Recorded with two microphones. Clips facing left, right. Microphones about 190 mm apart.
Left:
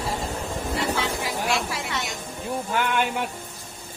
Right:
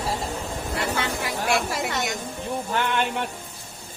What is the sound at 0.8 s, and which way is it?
Vehicle, 55° right (ahead or behind).